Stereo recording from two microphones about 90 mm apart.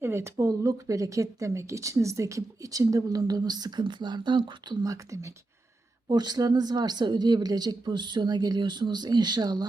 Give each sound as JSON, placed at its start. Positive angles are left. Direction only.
{"t": 0.0, "sound": "speech", "side_deg": -30}
{"t": 4.9, "sound": "speech", "side_deg": -35}
{"t": 6.1, "sound": "speech", "side_deg": -50}